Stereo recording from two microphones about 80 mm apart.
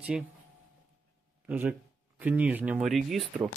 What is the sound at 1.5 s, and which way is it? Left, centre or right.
Speech, right.